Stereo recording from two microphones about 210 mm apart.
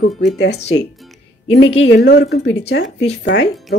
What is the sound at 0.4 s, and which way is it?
Speech, 55° left (ahead or behind).